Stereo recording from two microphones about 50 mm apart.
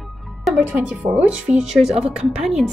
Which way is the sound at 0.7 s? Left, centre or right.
Right.